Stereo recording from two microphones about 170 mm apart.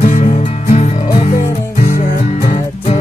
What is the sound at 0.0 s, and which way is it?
Music, 50° left (ahead or behind).